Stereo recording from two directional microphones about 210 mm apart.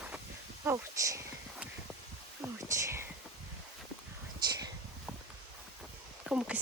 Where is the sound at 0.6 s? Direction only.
15° right (ahead or behind).